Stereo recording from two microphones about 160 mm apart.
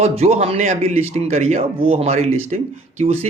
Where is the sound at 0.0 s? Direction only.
45° right (ahead or behind).